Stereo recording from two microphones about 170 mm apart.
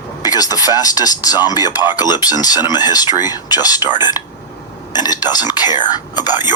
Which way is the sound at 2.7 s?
25° left (ahead or behind).